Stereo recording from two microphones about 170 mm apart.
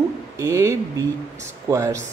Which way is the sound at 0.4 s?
20° right (ahead or behind).